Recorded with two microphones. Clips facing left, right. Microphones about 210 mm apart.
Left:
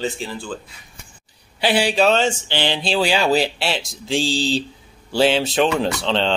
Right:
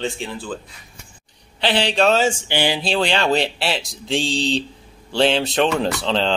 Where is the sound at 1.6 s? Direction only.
10° left (ahead or behind); by 2.8 s 10° right (ahead or behind).